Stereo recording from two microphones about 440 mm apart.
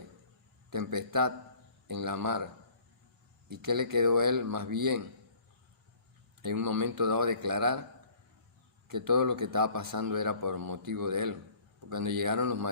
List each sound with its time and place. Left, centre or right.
0.7 s a man's voice: right
3.5 s a man's voice: right
6.4 s a man's voice: right
8.9 s a man's voice: right